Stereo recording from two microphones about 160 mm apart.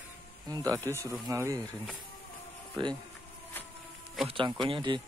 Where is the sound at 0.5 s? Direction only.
25° right (ahead or behind).